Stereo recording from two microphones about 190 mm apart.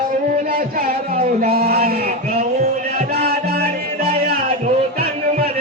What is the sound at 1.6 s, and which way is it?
Music, 50° right (ahead or behind).